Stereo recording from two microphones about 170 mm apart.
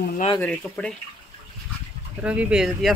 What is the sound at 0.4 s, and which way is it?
Speech, 5° left (ahead or behind).